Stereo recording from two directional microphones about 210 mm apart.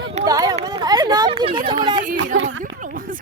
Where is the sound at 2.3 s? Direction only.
70° right (ahead or behind).